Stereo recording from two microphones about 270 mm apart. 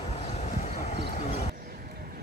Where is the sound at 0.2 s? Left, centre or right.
Left.